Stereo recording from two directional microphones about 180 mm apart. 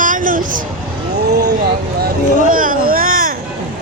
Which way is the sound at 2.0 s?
50° right (ahead or behind).